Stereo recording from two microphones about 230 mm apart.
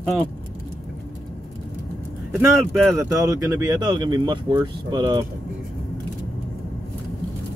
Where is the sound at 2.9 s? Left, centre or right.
Centre.